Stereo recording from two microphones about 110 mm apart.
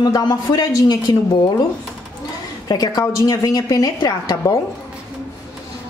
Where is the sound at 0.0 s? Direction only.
35° left (ahead or behind).